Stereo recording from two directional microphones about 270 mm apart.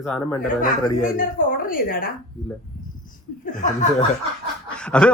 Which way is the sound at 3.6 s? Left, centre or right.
Left.